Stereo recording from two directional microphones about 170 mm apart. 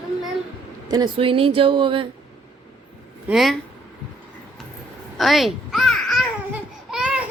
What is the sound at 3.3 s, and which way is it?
Speech, centre (ahead or behind).